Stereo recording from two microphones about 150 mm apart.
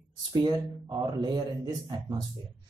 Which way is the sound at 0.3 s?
25° right (ahead or behind).